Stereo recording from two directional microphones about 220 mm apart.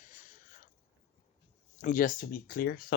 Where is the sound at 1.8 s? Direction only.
35° left (ahead or behind).